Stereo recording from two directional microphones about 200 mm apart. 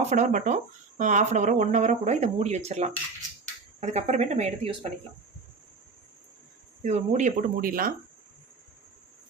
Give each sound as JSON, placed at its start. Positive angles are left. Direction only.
{"t": 0.1, "sound": "speech", "side_deg": -40}
{"t": 6.8, "sound": "speech", "side_deg": -35}